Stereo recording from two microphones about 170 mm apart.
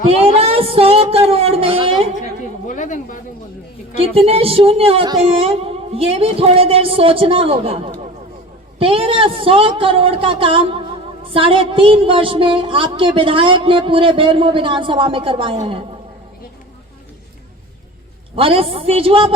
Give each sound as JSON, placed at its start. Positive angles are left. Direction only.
{"t": 0.1, "sound": "a sound", "side_deg": -35}
{"t": 2.6, "sound": "speech", "side_deg": 50}
{"t": 3.9, "sound": "a woman's voice", "side_deg": -35}
{"t": 18.3, "sound": "a woman's voice", "side_deg": -35}